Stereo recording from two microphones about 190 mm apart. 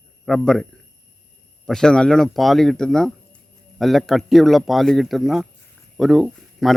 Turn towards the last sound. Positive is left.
turn(degrees=0)  # may be behind; listen again after turning